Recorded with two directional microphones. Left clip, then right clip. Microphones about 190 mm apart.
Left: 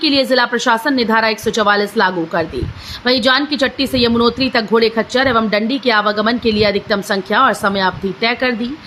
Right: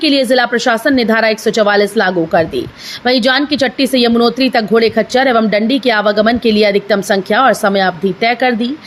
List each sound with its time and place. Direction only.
0.0 s a woman's voice: 10° right (ahead or behind)